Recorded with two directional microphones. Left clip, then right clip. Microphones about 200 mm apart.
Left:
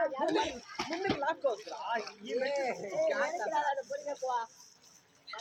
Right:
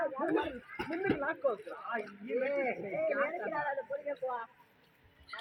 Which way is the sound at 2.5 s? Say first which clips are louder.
Left 1 dB; 35° right (ahead or behind).